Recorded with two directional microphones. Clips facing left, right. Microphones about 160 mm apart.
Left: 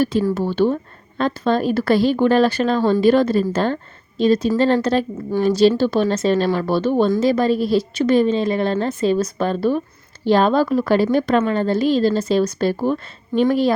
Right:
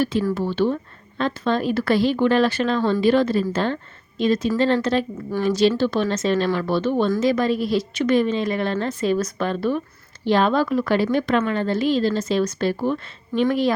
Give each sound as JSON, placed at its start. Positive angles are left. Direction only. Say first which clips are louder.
{"t": 0.0, "sound": "a woman's voice", "louder": "left 3 dB", "side_deg": 40}